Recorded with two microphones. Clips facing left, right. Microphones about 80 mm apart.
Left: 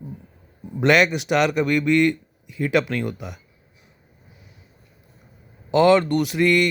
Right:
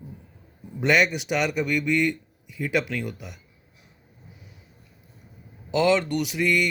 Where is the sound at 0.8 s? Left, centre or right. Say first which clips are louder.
Left 4 dB; left.